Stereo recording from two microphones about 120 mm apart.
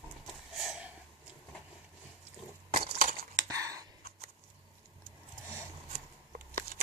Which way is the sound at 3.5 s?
25° right (ahead or behind).